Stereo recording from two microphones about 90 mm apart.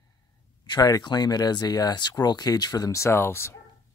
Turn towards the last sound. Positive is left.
turn(degrees=25)  # may be behind; listen again after turning